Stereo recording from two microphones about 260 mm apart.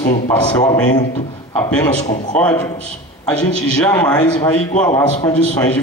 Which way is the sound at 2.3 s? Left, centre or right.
Centre.